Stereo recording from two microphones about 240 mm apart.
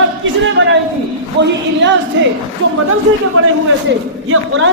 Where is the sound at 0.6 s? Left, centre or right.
Right.